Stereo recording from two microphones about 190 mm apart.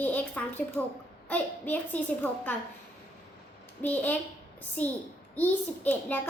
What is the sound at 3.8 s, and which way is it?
A woman's voice, 10° left (ahead or behind).